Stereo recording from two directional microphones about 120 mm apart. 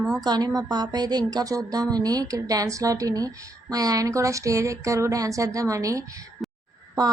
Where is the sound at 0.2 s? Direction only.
35° right (ahead or behind).